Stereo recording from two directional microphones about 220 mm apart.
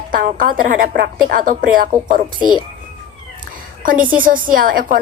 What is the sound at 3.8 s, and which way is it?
A woman's voice, 40° right (ahead or behind).